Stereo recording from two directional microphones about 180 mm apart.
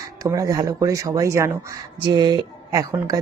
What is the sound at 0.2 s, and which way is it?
A woman's voice, 20° right (ahead or behind).